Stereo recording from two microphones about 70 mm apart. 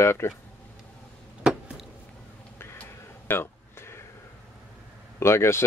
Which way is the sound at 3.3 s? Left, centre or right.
Left.